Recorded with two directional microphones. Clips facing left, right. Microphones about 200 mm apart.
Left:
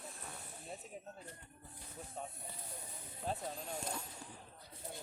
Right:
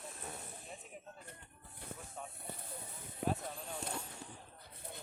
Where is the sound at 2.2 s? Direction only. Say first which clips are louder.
Left 3 dB; 30° left (ahead or behind).